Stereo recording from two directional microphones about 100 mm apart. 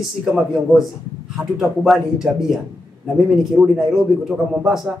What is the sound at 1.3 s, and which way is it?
A man's voice, centre (ahead or behind).